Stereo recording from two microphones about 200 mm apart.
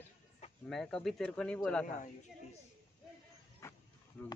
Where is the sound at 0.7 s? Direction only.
5° left (ahead or behind).